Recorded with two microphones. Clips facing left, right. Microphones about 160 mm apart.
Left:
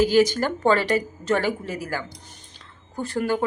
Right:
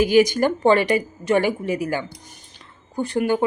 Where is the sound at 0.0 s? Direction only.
15° right (ahead or behind).